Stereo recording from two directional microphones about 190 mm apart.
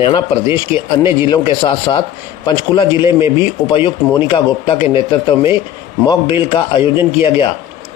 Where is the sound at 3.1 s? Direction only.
15° right (ahead or behind).